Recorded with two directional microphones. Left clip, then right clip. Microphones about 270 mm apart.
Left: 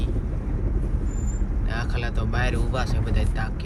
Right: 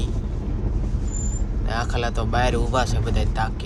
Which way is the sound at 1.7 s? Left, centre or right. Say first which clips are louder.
Right 6 dB; centre.